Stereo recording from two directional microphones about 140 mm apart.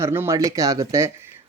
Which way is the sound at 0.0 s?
20° right (ahead or behind).